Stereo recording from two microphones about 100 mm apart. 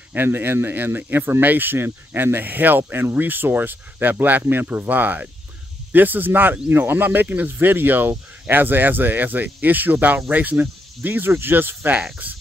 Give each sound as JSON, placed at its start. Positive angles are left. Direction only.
{"t": 0.1, "sound": "speech", "side_deg": -20}